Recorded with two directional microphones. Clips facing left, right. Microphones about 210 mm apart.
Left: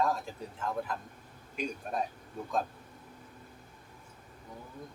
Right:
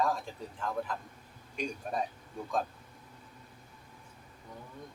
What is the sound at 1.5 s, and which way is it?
Speech, 5° left (ahead or behind).